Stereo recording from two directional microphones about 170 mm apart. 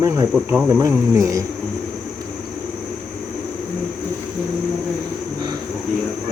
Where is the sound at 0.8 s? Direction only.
20° right (ahead or behind).